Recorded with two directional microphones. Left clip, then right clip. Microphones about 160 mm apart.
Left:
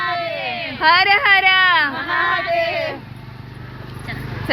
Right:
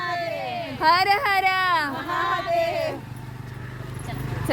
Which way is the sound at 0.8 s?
5° right (ahead or behind).